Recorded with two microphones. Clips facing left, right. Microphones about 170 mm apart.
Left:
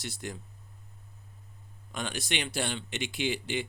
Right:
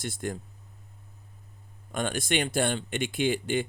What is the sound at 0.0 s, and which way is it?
Speech, 50° right (ahead or behind).